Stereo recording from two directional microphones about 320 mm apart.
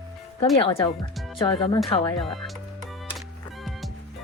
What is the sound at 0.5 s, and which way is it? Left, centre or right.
Speech, centre.